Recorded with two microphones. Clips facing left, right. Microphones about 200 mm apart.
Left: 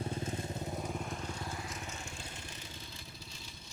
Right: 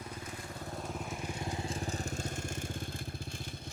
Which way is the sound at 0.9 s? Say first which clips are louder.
Even; centre (ahead or behind).